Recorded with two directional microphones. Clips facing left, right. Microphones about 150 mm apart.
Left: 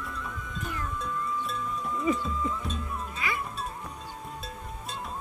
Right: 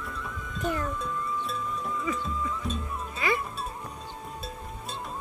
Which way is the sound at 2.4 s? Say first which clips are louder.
Left 2 dB; 25° left (ahead or behind).